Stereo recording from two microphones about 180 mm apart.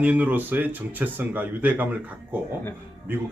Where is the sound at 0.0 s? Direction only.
10° right (ahead or behind).